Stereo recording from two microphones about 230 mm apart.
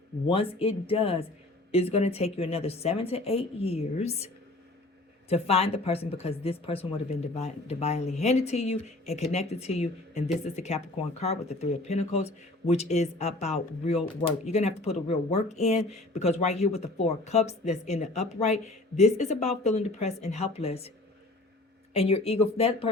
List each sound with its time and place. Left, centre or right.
0.3 s speech: left
5.3 s speech: left
21.9 s speech: left